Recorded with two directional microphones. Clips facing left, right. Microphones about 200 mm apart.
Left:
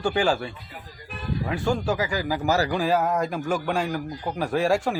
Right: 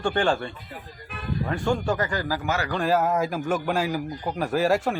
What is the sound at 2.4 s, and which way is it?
Speech, 35° left (ahead or behind).